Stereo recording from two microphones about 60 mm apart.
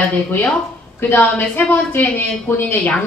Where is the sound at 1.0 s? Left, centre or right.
Left.